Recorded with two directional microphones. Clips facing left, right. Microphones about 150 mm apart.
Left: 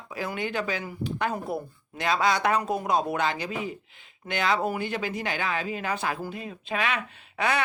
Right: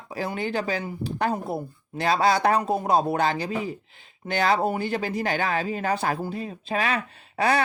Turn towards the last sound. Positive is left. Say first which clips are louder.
# right 4 dB
turn(degrees=-35)  # may be behind; listen again after turning